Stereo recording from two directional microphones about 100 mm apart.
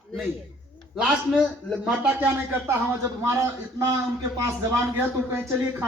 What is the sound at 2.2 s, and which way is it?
A man's voice, 25° right (ahead or behind).